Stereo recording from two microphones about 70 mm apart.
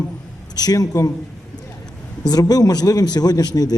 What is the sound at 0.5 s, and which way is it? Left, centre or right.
Speech, left.